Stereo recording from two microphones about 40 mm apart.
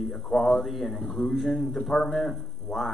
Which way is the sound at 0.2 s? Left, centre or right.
Left.